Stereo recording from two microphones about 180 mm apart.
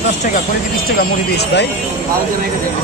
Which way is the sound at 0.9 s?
55° left (ahead or behind).